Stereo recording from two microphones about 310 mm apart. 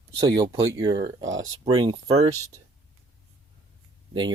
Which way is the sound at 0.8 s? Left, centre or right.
Centre.